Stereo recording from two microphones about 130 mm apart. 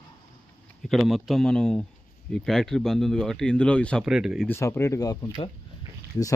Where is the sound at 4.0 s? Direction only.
5° right (ahead or behind).